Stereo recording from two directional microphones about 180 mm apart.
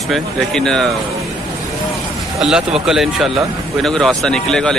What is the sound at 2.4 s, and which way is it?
Speech, 5° right (ahead or behind).